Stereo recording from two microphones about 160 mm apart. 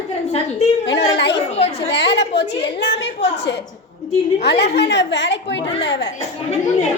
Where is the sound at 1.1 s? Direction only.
90° left.